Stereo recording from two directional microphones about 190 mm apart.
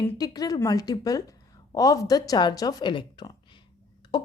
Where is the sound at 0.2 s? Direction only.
20° left (ahead or behind).